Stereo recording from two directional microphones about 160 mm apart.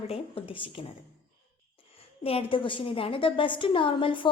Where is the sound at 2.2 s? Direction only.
35° left (ahead or behind).